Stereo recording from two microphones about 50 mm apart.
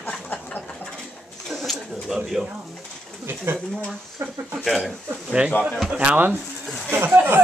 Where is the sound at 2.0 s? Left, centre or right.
Centre.